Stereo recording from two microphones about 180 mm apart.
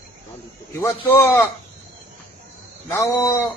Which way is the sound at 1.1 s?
10° left (ahead or behind).